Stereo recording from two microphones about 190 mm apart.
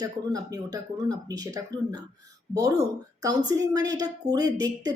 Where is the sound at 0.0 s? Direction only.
20° right (ahead or behind).